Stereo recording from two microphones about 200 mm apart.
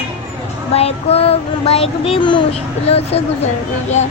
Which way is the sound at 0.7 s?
30° left (ahead or behind).